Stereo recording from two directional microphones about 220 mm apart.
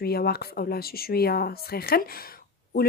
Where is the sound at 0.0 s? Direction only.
45° left (ahead or behind).